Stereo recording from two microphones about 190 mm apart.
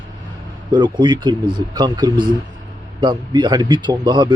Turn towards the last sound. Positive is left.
turn(degrees=-25)  # may be behind; listen again after turning